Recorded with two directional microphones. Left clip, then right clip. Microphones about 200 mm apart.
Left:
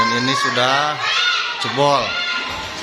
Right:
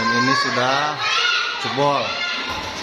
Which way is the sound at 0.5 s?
15° left (ahead or behind).